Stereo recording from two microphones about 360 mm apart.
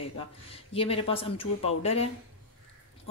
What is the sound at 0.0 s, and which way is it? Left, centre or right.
Speech, centre.